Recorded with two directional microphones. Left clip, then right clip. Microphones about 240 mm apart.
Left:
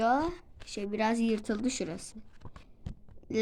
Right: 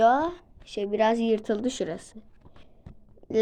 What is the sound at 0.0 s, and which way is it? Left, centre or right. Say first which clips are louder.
A woman's voice: right 7 dB; left.